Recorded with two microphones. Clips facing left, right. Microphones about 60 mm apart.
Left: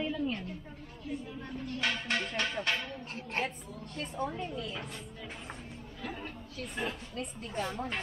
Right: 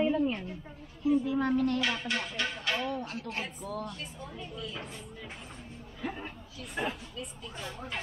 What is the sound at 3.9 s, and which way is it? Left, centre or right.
Music, left.